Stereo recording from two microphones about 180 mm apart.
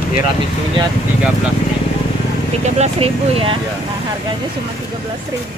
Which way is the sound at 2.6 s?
35° right (ahead or behind).